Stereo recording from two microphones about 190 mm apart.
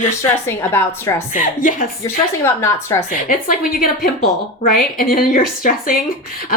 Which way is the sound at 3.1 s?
45° left (ahead or behind).